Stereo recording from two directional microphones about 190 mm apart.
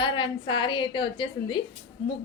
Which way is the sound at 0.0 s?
25° left (ahead or behind).